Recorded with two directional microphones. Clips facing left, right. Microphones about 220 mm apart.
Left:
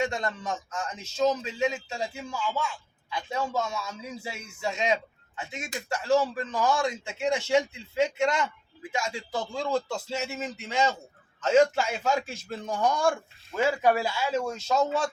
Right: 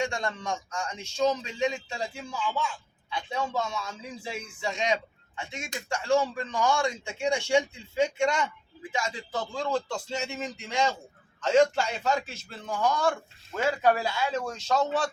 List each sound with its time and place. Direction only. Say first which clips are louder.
0.0 s speech: left 1 dB; 5° left (ahead or behind)